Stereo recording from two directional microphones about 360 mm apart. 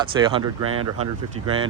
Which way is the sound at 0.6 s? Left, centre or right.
Right.